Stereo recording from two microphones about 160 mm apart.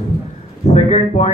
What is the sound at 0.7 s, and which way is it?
Speech, 40° left (ahead or behind).